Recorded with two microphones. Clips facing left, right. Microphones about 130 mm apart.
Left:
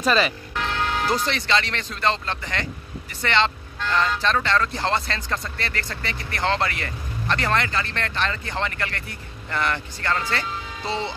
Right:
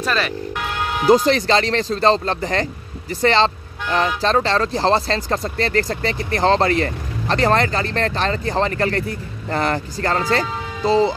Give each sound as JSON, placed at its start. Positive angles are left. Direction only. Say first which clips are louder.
{"t": 0.0, "sound": "speech", "louder": "left 1 dB", "side_deg": 0}
{"t": 0.6, "sound": "music", "louder": "left 1 dB", "side_deg": -10}
{"t": 1.1, "sound": "speech", "louder": "right 12 dB", "side_deg": -40}